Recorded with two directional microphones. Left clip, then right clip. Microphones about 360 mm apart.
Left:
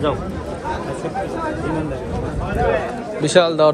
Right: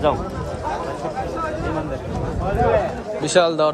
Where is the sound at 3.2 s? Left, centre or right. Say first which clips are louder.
Left 3 dB; centre.